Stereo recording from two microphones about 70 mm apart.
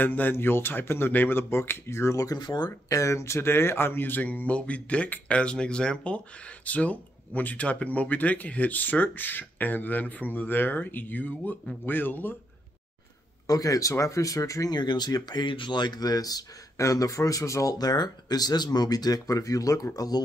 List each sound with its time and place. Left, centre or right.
0.0 s speech: left
2.2 s speech: left
2.9 s speech: left
13.5 s speech: left
14.7 s speech: left